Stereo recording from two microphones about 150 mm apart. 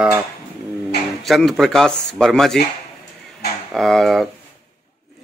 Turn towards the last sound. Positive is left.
turn(degrees=0)  # may be behind; listen again after turning